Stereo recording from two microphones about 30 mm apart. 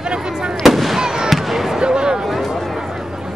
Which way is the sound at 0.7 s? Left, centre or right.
Centre.